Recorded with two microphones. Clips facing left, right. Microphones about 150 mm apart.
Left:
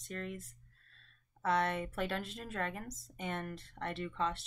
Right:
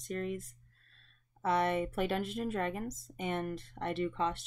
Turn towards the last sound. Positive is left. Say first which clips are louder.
# right 4 dB
turn(degrees=-15)  # may be behind; listen again after turning